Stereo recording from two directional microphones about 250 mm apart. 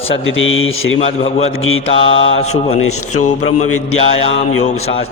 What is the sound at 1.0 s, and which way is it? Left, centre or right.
Speech, left.